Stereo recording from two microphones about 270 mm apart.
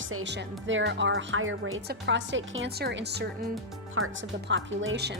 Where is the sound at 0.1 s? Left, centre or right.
Right.